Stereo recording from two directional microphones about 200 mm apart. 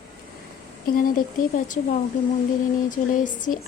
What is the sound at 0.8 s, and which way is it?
A woman's voice, 45° left (ahead or behind).